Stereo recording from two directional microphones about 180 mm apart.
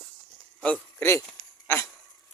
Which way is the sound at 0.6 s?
10° left (ahead or behind).